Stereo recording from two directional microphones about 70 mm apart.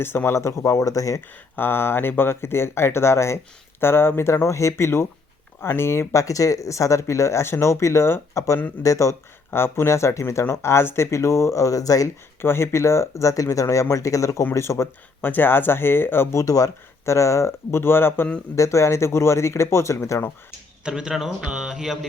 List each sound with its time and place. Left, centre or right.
0.0 s speech: left
1.5 s speech: left
9.5 s speech: left
12.4 s speech: left
15.2 s speech: left
16.4 s speech: left
18.5 s speech: left
20.8 s speech: centre